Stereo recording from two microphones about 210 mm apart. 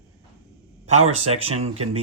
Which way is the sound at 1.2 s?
30° right (ahead or behind).